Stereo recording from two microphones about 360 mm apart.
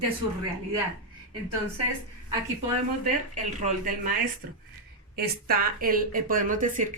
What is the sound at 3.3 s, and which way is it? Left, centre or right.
Speech, right.